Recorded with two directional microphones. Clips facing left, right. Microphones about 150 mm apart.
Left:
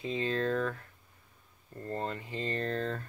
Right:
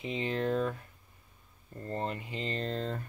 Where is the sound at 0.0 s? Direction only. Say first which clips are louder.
Left 1 dB; 20° right (ahead or behind).